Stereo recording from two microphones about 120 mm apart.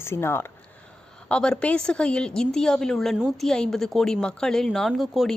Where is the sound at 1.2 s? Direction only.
5° left (ahead or behind).